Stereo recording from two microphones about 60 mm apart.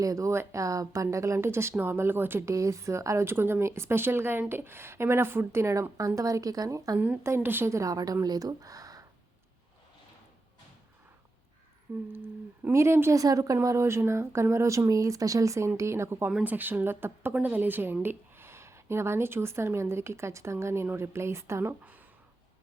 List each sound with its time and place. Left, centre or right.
0.0 s speech: right
1.0 s speech: right
2.5 s speech: right
3.2 s speech: right
6.0 s a woman's voice: right
7.3 s speech: right
7.7 s a woman's voice: right
12.0 s speech: right
12.7 s speech: right
13.1 s speech: right
16.4 s speech: right